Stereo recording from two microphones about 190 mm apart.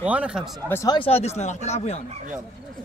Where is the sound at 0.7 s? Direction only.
15° left (ahead or behind).